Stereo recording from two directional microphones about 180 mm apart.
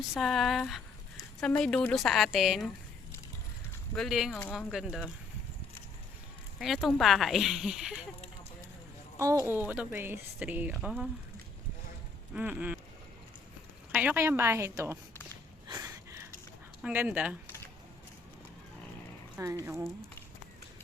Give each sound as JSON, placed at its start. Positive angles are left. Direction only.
{"t": 0.1, "sound": "speech", "side_deg": 0}
{"t": 3.9, "sound": "speech", "side_deg": 0}
{"t": 6.6, "sound": "speech", "side_deg": 0}
{"t": 9.1, "sound": "speech", "side_deg": -15}
{"t": 12.3, "sound": "speech", "side_deg": -10}
{"t": 13.9, "sound": "speech", "side_deg": -10}
{"t": 15.6, "sound": "a sound", "side_deg": -20}
{"t": 16.8, "sound": "speech", "side_deg": -10}
{"t": 19.4, "sound": "speech", "side_deg": -15}